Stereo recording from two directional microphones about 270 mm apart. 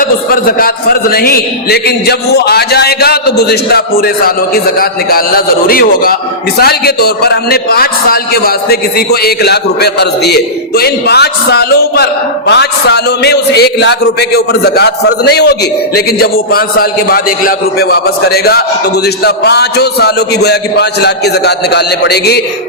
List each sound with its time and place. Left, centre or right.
0.0 s a man's voice: left